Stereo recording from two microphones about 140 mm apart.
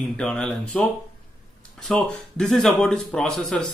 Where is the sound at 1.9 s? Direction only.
5° left (ahead or behind).